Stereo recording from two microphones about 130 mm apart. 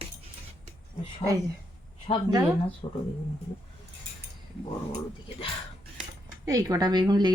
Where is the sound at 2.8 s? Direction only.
40° left (ahead or behind).